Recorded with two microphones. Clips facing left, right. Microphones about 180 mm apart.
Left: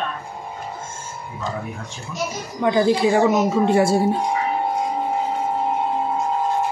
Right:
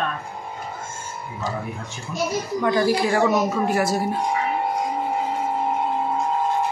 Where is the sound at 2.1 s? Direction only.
20° left (ahead or behind).